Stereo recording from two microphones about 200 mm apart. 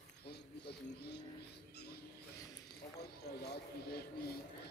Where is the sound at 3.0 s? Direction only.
50° left (ahead or behind).